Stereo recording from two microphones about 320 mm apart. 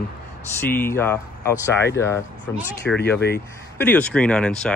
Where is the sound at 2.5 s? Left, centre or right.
Centre.